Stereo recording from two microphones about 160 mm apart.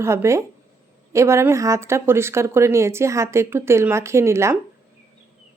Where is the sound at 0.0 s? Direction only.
15° right (ahead or behind).